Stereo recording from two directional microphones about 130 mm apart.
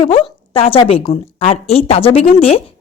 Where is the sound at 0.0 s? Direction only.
45° left (ahead or behind).